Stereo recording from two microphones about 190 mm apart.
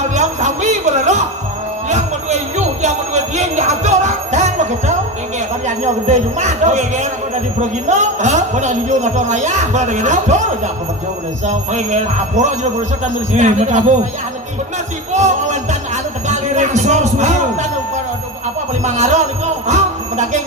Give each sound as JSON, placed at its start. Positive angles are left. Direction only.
{"t": 0.0, "sound": "a sound", "side_deg": -40}
{"t": 5.6, "sound": "a man's voice", "side_deg": -40}
{"t": 15.1, "sound": "music", "side_deg": -40}
{"t": 16.3, "sound": "a man's voice", "side_deg": -40}
{"t": 18.9, "sound": "a man's voice", "side_deg": -40}
{"t": 19.6, "sound": "music", "side_deg": -40}